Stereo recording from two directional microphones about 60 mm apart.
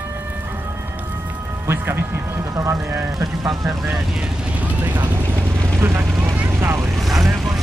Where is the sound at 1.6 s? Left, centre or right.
Right.